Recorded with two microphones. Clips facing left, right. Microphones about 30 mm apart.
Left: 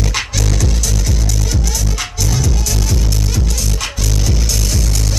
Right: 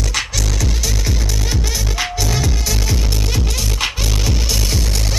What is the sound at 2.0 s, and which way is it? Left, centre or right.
Music, right.